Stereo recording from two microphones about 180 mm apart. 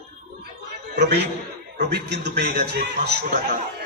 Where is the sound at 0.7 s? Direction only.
70° right (ahead or behind).